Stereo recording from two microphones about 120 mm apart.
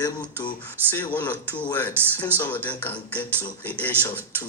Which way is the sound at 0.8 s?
15° right (ahead or behind).